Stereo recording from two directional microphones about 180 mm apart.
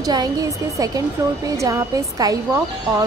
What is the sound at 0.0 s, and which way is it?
A woman's voice, 20° right (ahead or behind).